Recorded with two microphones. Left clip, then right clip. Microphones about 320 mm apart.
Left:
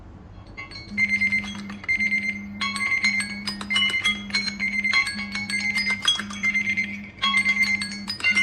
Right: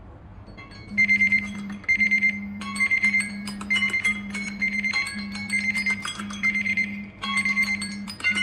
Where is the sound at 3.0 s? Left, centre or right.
Centre.